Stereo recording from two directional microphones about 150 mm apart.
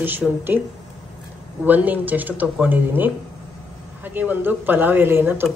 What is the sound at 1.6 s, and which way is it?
Speech, 10° right (ahead or behind).